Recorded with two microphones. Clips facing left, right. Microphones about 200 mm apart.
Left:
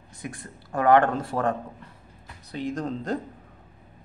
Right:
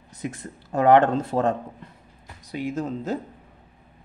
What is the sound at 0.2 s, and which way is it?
Speech, 20° right (ahead or behind).